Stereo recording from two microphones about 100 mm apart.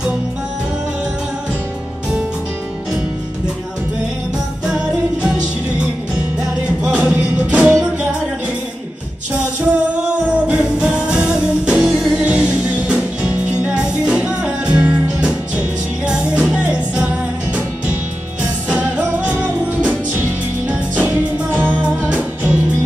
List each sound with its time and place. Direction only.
4.6 s music: 10° right (ahead or behind)
6.8 s music: 10° right (ahead or behind)
9.6 s music: 15° right (ahead or behind)
18.7 s music: 15° right (ahead or behind)